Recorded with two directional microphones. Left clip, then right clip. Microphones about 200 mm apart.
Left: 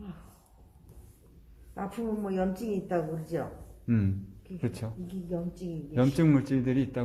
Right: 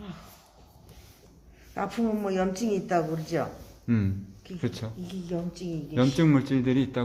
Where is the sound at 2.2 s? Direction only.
30° right (ahead or behind).